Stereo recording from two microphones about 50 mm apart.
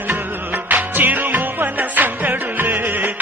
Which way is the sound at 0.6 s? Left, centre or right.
Right.